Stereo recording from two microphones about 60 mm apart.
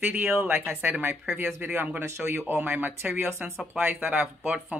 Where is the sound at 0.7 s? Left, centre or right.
Right.